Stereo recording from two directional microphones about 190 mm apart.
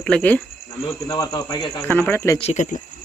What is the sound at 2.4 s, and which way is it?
Speech, 40° left (ahead or behind).